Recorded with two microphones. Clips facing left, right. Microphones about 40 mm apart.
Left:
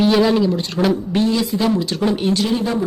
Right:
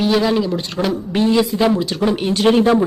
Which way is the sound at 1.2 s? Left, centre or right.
Centre.